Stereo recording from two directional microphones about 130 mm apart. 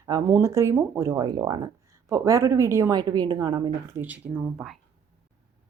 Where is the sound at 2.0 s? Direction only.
25° right (ahead or behind).